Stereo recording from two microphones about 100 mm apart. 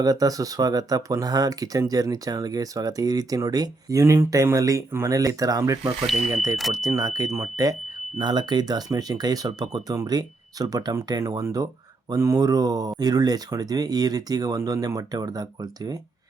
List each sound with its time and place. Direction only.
0.0 s speech: 35° right (ahead or behind)
6.1 s speech: 5° right (ahead or behind)
6.8 s speech: 35° right (ahead or behind)